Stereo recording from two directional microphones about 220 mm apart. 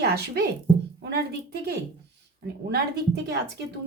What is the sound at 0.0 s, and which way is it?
Speech, 45° right (ahead or behind).